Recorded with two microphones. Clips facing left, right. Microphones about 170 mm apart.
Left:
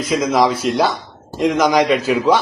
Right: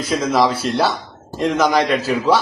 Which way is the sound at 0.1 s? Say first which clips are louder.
Left 1 dB; 5° left (ahead or behind).